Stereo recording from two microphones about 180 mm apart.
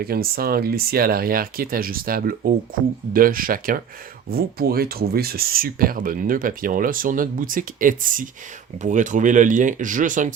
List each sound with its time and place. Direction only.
0.0 s speech: 55° right (ahead or behind)